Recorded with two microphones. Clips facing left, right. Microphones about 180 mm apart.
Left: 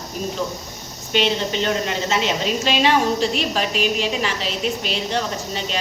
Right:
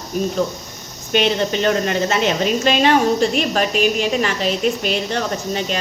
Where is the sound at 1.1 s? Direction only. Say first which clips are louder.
Right 3 dB; 55° right (ahead or behind).